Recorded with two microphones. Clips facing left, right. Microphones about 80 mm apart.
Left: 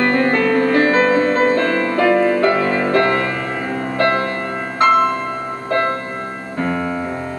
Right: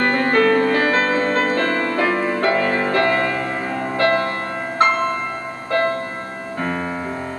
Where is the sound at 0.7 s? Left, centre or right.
Left.